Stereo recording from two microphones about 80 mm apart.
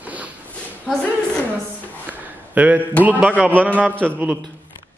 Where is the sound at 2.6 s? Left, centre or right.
Centre.